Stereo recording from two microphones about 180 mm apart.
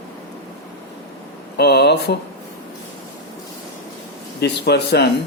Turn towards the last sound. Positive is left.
turn(degrees=70)  # may be behind; listen again after turning